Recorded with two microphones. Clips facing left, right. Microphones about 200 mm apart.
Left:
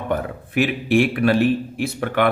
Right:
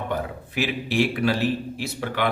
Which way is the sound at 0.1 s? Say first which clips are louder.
Left 5 dB; 55° left (ahead or behind).